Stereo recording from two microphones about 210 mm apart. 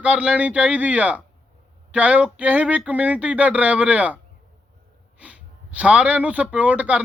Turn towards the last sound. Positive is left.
turn(degrees=-5)  # may be behind; listen again after turning